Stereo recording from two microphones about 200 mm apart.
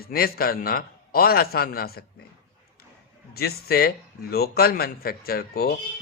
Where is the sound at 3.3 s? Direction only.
50° left (ahead or behind).